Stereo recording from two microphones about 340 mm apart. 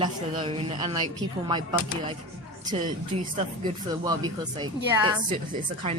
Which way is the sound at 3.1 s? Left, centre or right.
Right.